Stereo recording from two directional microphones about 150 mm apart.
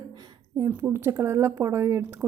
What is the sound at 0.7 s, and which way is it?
A woman's voice, 15° right (ahead or behind).